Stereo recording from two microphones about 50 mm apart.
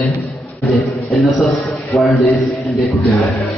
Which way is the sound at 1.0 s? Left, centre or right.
Centre.